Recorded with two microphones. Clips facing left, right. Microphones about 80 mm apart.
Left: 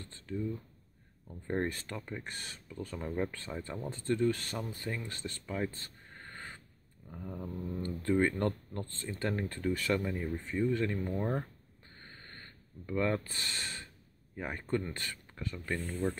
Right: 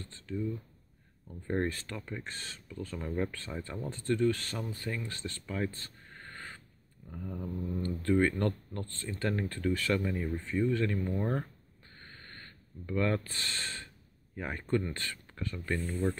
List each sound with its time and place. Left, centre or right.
0.0 s a sound: left
1.2 s speech: centre
1.7 s speech: left
7.1 s speech: centre
7.8 s speech: left
11.0 s speech: centre
11.8 s a sound: left
12.8 s speech: centre
15.9 s speech: centre